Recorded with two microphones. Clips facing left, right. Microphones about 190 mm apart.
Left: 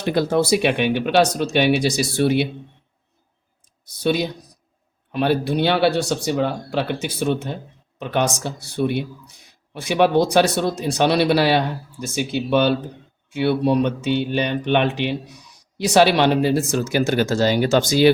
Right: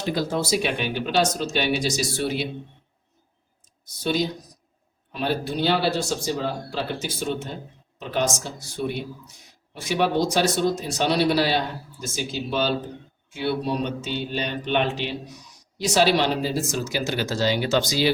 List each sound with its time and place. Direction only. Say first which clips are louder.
0.0 s speech: left 6 dB; 60° left (ahead or behind)
4.0 s speech: left 4 dB; 65° left (ahead or behind)